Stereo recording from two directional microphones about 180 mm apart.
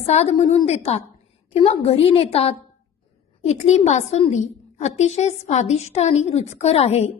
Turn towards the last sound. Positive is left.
turn(degrees=35)  # may be behind; listen again after turning